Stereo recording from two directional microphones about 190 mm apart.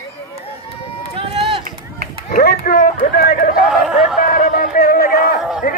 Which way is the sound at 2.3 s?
50° left (ahead or behind).